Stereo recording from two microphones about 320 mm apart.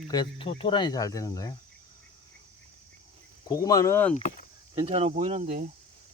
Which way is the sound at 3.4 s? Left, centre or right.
Centre.